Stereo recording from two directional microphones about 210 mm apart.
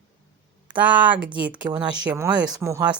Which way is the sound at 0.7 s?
5° right (ahead or behind).